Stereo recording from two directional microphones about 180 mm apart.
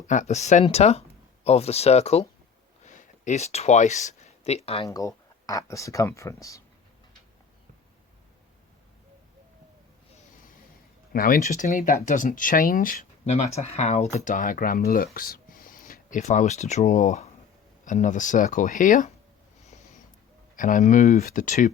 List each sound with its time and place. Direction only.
0.1 s speech: 40° left (ahead or behind)
4.9 s speech: 20° left (ahead or behind)
11.1 s speech: 50° left (ahead or behind)
19.6 s a sound: 40° left (ahead or behind)
20.6 s speech: 45° left (ahead or behind)